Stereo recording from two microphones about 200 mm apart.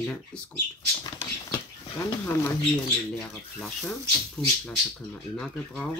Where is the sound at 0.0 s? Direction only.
5° left (ahead or behind).